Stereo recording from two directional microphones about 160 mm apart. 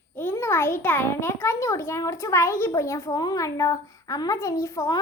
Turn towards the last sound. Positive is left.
turn(degrees=20)  # may be behind; listen again after turning